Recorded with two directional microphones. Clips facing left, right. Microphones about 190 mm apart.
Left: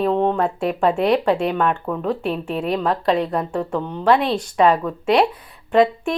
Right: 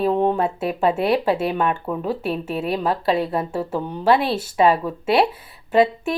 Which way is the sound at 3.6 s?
30° right (ahead or behind).